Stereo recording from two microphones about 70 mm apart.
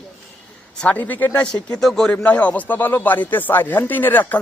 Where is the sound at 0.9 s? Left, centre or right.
Left.